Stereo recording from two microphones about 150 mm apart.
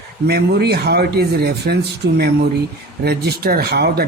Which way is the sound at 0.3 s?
90° right.